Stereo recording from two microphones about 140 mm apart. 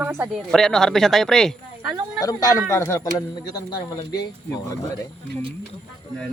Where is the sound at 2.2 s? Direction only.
25° left (ahead or behind).